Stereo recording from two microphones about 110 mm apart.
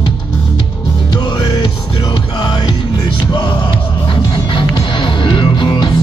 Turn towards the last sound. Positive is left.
turn(degrees=45)  # may be behind; listen again after turning